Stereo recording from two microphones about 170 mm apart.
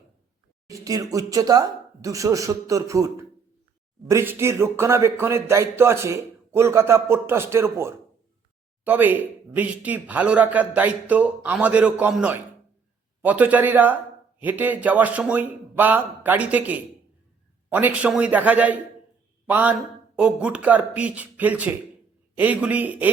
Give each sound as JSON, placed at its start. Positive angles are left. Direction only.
{"t": 0.7, "sound": "speech", "side_deg": -20}